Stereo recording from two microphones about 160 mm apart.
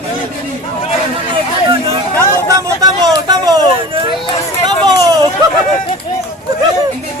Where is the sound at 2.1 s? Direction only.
20° right (ahead or behind).